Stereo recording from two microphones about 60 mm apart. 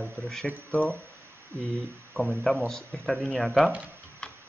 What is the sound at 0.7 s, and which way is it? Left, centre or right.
Speech, right.